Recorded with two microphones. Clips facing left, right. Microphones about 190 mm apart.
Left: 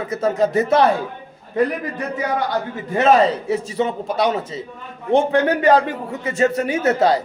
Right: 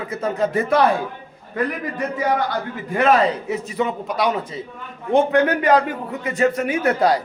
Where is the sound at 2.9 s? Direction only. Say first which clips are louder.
Left 2 dB; 25° left (ahead or behind).